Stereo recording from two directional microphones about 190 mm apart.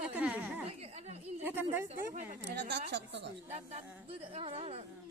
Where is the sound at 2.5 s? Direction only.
65° right (ahead or behind).